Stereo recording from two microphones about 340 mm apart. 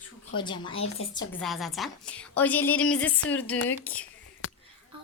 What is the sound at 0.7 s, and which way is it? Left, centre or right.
Speech, left.